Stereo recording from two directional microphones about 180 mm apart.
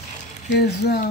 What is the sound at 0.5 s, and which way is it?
Speech, 65° left (ahead or behind).